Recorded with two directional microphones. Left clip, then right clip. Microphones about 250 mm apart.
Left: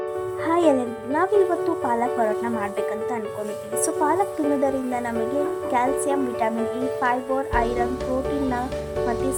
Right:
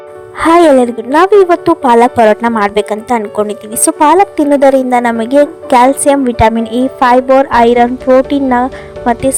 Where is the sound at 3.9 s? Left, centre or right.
Right.